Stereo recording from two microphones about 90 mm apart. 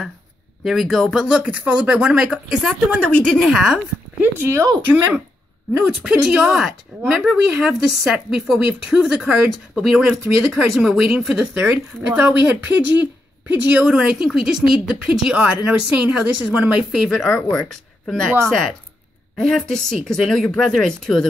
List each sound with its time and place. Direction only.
0.7 s speech: centre (ahead or behind)
3.0 s speech: 10° left (ahead or behind)
3.4 s a woman's voice: 5° right (ahead or behind)
4.2 s speech: 30° right (ahead or behind)
5.7 s a woman's voice: 10° right (ahead or behind); by 21.3 s 5° left (ahead or behind)